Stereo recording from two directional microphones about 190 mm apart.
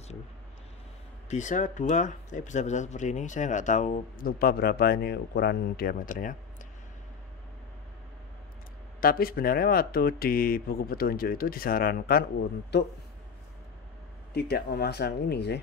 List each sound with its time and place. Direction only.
1.3 s speech: 40° left (ahead or behind)
9.0 s speech: 50° left (ahead or behind)
14.3 s speech: 55° left (ahead or behind)